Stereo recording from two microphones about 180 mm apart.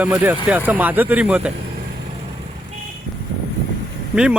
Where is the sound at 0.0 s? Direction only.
10° right (ahead or behind).